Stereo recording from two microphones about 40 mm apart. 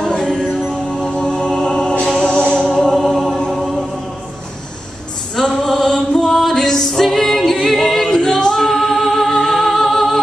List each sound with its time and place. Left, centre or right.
0.2 s music: centre
2.8 s choir: centre
3.5 s a capella: centre
5.3 s music: centre
8.5 s music: centre